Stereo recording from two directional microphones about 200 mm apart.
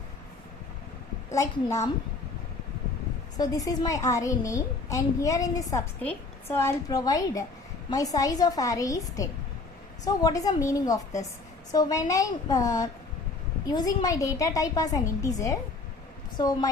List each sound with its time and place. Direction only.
1.3 s a child's voice: 15° left (ahead or behind)
3.3 s a child's voice: 20° left (ahead or behind)